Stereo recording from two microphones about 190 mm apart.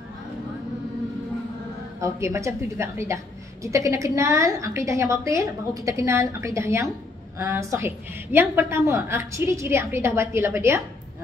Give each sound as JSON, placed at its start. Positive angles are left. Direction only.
{"t": 2.0, "sound": "a woman's voice", "side_deg": -15}